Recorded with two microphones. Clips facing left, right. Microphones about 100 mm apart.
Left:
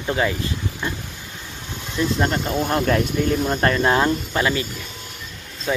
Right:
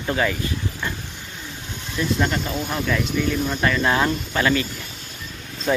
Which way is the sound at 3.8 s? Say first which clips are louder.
Left 2 dB; 25° left (ahead or behind).